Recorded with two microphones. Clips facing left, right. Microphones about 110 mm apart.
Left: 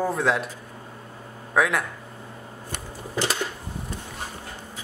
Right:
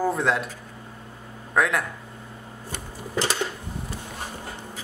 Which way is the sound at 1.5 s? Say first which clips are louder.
Even; centre (ahead or behind).